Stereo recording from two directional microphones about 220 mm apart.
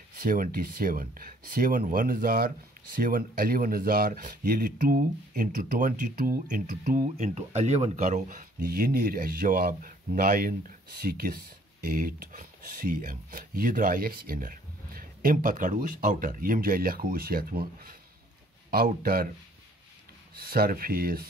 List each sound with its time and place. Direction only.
0.2 s speech: 40° right (ahead or behind)
20.3 s speech: 45° right (ahead or behind)